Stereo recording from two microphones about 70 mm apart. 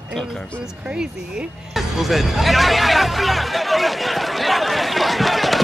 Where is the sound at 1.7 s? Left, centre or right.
Centre.